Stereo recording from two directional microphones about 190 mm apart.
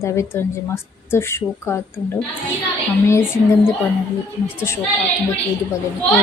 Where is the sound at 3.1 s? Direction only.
15° left (ahead or behind).